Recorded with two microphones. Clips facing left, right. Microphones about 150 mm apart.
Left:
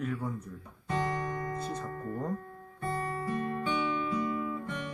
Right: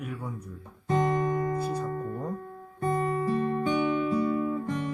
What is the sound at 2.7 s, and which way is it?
Guitar, 40° right (ahead or behind).